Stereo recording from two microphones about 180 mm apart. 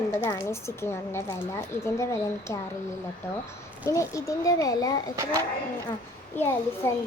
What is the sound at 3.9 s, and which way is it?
Speech, 15° left (ahead or behind).